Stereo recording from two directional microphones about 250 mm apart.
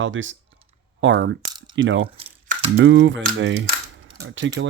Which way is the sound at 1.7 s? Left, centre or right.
Right.